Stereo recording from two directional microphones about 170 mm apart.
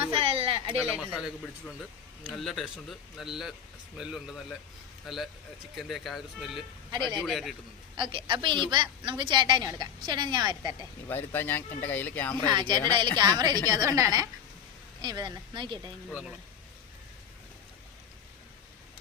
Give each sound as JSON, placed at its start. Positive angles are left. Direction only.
{"t": 0.1, "sound": "a sound", "side_deg": -35}
{"t": 0.9, "sound": "a man's voice", "side_deg": -5}
{"t": 7.9, "sound": "a woman's voice", "side_deg": -30}
{"t": 11.1, "sound": "speech", "side_deg": 10}
{"t": 12.5, "sound": "a woman's voice", "side_deg": -25}